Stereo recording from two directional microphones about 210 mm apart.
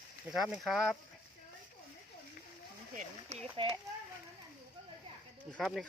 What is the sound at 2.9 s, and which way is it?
Speech, 30° right (ahead or behind).